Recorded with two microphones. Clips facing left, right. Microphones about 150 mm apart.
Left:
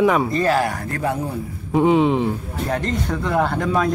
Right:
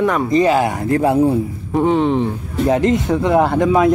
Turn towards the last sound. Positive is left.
turn(degrees=-20)  # may be behind; listen again after turning